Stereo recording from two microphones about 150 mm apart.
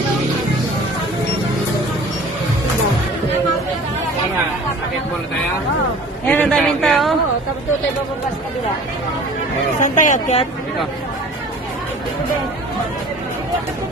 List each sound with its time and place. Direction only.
6.2 s a man's voice: 10° left (ahead or behind)
9.8 s speech: 60° left (ahead or behind)